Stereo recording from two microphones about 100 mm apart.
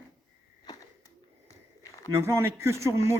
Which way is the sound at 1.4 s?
30° left (ahead or behind).